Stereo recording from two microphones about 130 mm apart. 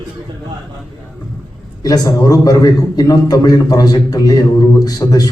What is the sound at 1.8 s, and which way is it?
A man's voice, 30° left (ahead or behind).